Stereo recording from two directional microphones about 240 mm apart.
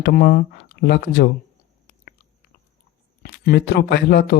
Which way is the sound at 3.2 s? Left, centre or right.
Left.